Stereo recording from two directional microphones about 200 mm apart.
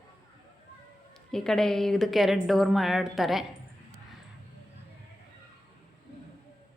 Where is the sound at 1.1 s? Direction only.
5° left (ahead or behind).